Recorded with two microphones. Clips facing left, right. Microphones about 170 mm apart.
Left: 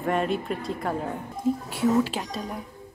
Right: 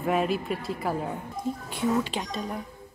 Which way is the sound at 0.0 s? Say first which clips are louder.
Even; 5° right (ahead or behind).